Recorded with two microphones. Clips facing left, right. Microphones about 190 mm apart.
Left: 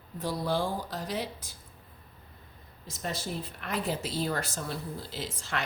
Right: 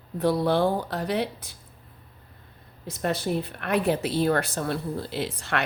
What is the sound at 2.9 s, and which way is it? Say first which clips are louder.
Speech: right 9 dB; 60° right (ahead or behind).